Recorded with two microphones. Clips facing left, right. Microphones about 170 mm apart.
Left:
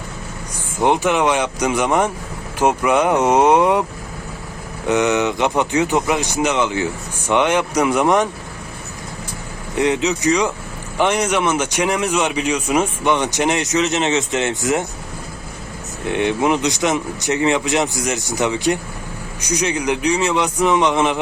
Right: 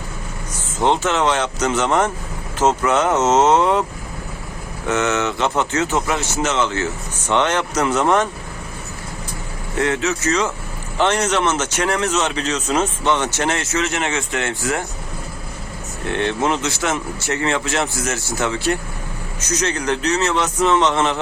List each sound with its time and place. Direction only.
0.5 s a man's voice: 15° left (ahead or behind)
4.9 s a man's voice: 15° left (ahead or behind)
9.7 s a man's voice: 15° left (ahead or behind)
16.0 s a man's voice: 15° left (ahead or behind)